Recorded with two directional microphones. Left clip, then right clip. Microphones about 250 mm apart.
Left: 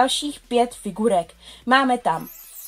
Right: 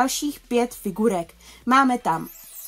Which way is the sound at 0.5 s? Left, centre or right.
Right.